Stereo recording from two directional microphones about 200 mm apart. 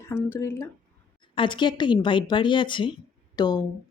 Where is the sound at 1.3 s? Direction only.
25° left (ahead or behind).